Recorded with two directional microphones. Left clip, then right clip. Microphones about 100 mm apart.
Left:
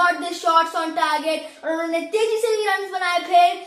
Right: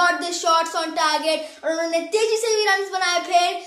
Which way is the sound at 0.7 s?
35° right (ahead or behind).